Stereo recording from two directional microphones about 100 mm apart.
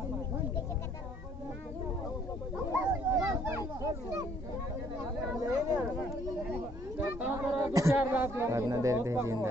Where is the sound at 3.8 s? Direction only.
35° right (ahead or behind).